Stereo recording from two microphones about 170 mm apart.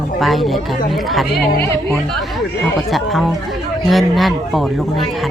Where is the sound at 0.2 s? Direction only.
Centre (ahead or behind).